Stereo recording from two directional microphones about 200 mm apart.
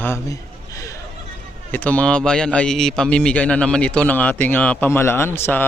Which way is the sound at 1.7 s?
5° left (ahead or behind).